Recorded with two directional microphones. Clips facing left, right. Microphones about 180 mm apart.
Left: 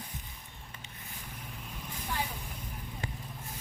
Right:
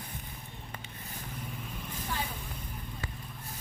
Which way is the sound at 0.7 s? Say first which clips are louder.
Right 6 dB; 65° right (ahead or behind).